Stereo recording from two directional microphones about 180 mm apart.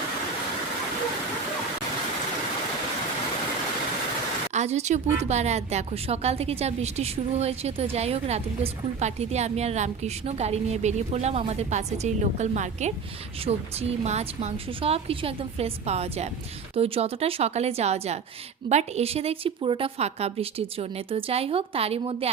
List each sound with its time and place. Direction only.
4.5 s a woman's voice: 40° right (ahead or behind)